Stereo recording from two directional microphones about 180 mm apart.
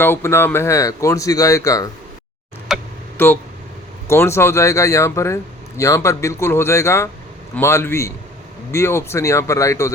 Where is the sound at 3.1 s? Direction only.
10° left (ahead or behind).